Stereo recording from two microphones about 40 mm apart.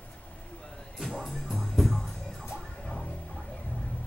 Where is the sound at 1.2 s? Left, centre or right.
Centre.